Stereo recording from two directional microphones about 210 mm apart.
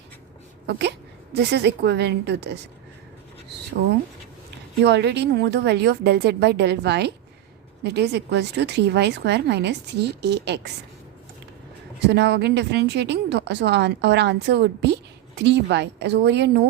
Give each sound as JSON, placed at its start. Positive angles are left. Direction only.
{"t": 0.7, "sound": "speech", "side_deg": -55}
{"t": 4.8, "sound": "speech", "side_deg": -55}
{"t": 11.9, "sound": "speech", "side_deg": -55}